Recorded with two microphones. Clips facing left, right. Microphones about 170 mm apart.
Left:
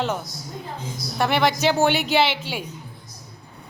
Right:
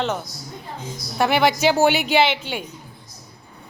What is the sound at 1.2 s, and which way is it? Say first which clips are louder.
A woman's voice: right 2 dB; 5° right (ahead or behind).